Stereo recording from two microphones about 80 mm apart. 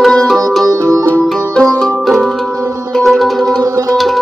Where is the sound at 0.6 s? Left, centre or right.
Right.